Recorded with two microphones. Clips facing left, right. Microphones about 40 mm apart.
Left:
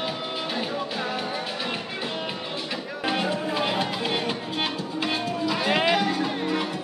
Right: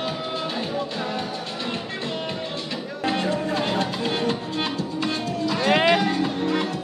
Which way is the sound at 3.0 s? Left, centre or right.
Centre.